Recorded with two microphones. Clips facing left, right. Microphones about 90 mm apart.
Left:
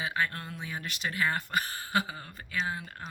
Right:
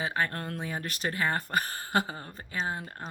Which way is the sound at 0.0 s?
40° right (ahead or behind).